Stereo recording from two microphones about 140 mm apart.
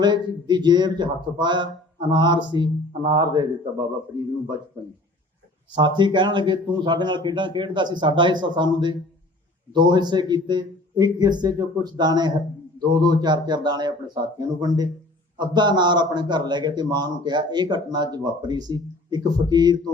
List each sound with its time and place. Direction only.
0.0 s a man's voice: 30° right (ahead or behind)
5.7 s a man's voice: 35° right (ahead or behind)